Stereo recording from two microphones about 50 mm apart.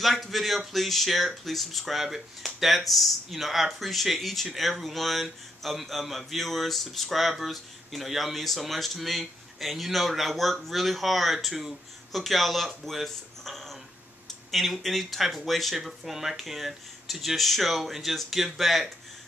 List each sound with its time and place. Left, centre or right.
0.0 s speech: centre